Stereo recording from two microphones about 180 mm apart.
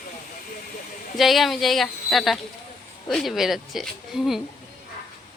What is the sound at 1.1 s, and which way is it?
A woman's voice, centre (ahead or behind).